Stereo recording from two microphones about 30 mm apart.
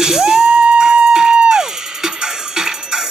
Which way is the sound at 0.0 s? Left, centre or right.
Centre.